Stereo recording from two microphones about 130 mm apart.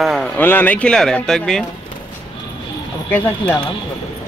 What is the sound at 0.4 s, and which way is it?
Speech, 15° left (ahead or behind).